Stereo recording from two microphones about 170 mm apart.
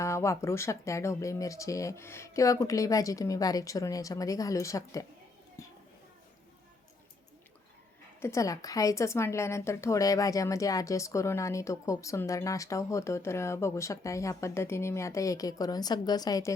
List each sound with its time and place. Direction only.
0.0 s speech: 15° left (ahead or behind)
8.2 s a woman's voice: 20° left (ahead or behind)